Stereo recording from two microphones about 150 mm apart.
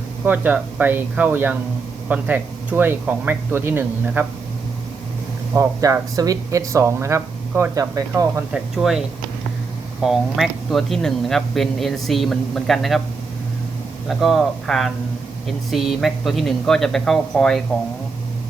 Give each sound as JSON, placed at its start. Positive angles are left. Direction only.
{"t": 0.3, "sound": "speech", "side_deg": -10}
{"t": 5.5, "sound": "speech", "side_deg": -20}
{"t": 8.5, "sound": "speech", "side_deg": 0}
{"t": 14.1, "sound": "speech", "side_deg": 0}